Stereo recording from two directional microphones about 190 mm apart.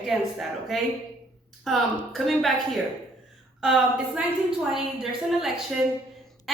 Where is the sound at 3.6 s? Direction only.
5° right (ahead or behind).